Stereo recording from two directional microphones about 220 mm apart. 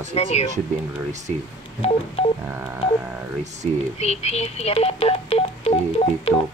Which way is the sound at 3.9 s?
30° left (ahead or behind).